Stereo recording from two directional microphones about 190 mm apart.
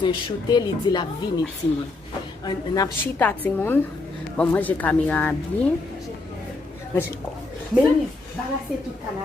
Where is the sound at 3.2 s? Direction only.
10° left (ahead or behind).